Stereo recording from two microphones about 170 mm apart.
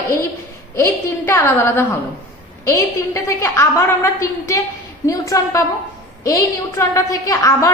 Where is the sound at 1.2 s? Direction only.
15° left (ahead or behind).